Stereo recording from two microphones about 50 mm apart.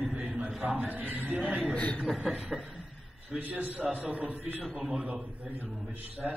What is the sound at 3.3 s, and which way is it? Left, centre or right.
A man's voice, right.